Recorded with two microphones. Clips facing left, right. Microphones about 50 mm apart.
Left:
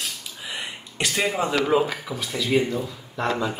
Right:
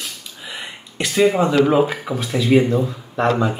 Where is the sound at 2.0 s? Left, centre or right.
Right.